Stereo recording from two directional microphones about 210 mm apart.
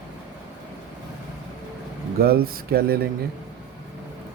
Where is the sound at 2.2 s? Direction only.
45° right (ahead or behind).